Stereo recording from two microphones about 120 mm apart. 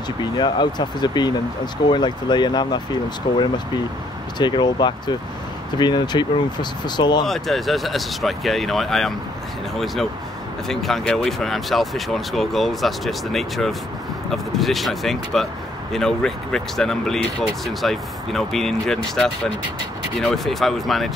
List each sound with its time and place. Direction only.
0.2 s speech: 40° left (ahead or behind)
7.2 s speech: centre (ahead or behind)
10.7 s speech: centre (ahead or behind)